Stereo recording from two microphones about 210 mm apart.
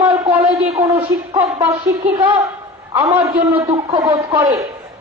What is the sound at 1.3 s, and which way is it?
Speech, 15° right (ahead or behind).